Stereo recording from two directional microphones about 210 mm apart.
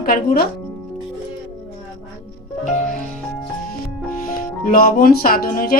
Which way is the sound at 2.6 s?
35° left (ahead or behind).